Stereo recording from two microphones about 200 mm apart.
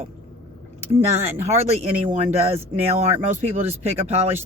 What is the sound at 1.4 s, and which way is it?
Speech, 35° right (ahead or behind).